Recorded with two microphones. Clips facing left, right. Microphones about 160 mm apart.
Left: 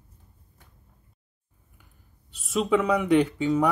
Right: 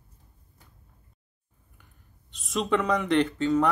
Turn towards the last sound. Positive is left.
turn(degrees=10)  # may be behind; listen again after turning